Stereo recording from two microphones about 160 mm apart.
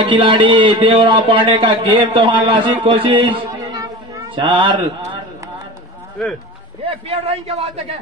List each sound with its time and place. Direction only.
0.0 s a man's voice: 35° right (ahead or behind)
6.8 s a man's voice: 35° right (ahead or behind)